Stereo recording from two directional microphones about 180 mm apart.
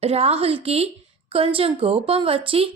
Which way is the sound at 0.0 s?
35° right (ahead or behind).